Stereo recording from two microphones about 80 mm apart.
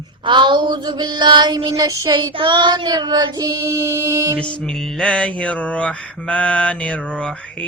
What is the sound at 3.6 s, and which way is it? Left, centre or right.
Music, right.